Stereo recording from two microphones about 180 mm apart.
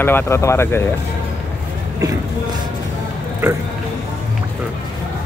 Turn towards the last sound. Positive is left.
turn(degrees=-10)  # may be behind; listen again after turning